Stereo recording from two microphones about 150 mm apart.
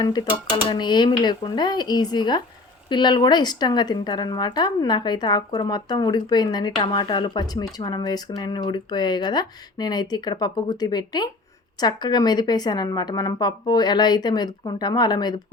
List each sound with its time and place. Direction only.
0.0 s a woman's voice: 30° left (ahead or behind)